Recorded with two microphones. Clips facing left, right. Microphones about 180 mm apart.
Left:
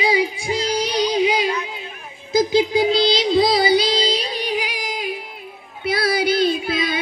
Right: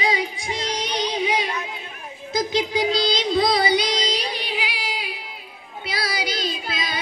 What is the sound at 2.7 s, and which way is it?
Child singing, 25° left (ahead or behind).